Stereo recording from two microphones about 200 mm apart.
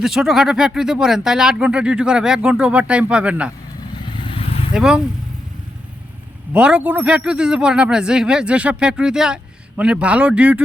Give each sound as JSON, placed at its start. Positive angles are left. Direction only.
{"t": 0.0, "sound": "speech", "side_deg": 0}
{"t": 4.2, "sound": "vehicle", "side_deg": 30}
{"t": 4.7, "sound": "speech", "side_deg": -5}
{"t": 6.5, "sound": "speech", "side_deg": -5}